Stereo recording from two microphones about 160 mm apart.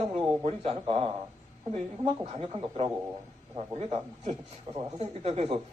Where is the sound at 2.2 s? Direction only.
40° right (ahead or behind).